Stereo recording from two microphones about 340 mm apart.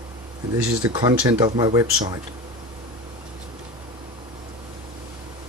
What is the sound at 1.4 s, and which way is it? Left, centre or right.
Speech, centre.